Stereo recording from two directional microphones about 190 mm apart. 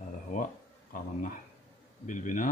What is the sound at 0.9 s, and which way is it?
Speech, 45° left (ahead or behind).